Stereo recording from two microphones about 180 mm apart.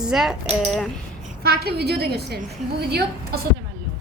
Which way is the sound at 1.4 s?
60° right (ahead or behind).